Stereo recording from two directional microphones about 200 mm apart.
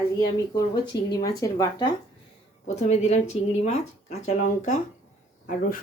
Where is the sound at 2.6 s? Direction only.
35° left (ahead or behind).